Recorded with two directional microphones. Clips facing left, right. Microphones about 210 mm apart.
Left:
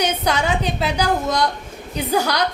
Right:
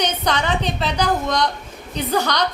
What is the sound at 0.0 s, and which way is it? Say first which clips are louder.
A woman's voice: left 1 dB; 10° left (ahead or behind).